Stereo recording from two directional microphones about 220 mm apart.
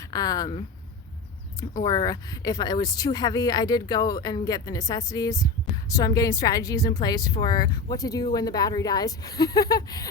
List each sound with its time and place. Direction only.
0.1 s a woman's voice: 15° left (ahead or behind)
1.8 s a woman's voice: 20° left (ahead or behind)